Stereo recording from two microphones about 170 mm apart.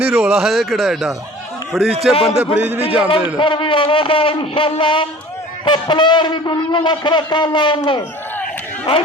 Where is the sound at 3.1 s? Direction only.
30° left (ahead or behind).